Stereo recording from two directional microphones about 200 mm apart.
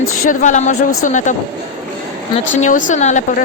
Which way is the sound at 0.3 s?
40° left (ahead or behind).